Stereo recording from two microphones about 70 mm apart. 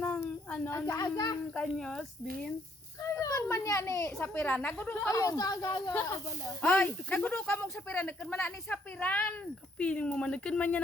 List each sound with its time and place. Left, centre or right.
0.9 s speech: left
1.5 s speech: centre
3.0 s speech: left
3.5 s a child's voice: left
4.2 s speech: left
5.0 s speech: left
6.6 s speech: left